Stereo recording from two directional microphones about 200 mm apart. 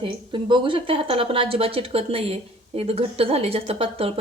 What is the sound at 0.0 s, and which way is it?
Speech, 25° right (ahead or behind).